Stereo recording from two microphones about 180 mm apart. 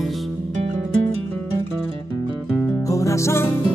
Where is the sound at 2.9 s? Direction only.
15° left (ahead or behind).